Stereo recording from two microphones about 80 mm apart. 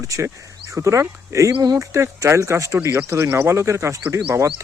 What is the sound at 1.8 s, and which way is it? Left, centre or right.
Speech, right.